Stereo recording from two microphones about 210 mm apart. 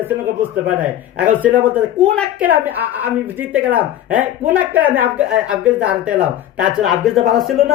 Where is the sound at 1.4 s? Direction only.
5° right (ahead or behind).